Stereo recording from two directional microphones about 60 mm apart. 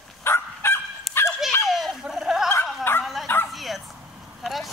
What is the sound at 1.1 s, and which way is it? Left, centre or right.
Dog, centre.